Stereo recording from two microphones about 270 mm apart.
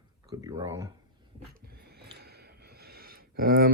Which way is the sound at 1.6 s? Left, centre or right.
Right.